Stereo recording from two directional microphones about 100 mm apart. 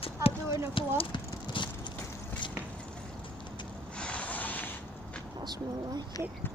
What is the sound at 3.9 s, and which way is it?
Vehicle, 10° left (ahead or behind).